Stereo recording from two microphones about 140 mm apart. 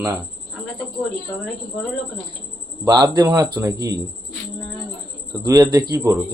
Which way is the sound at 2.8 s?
30° right (ahead or behind).